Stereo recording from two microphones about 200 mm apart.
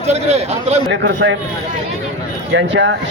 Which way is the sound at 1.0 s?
70° right (ahead or behind).